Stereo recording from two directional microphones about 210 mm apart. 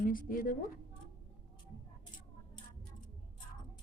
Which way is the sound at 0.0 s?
40° left (ahead or behind).